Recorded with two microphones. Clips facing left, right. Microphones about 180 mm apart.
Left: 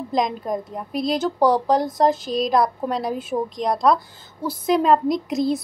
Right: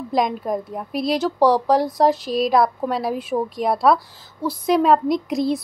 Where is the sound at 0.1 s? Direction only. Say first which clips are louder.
Right 2 dB; 5° right (ahead or behind).